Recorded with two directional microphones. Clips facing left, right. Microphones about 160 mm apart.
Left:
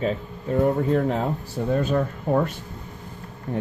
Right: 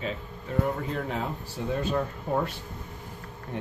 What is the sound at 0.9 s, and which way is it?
Speech, 45° left (ahead or behind).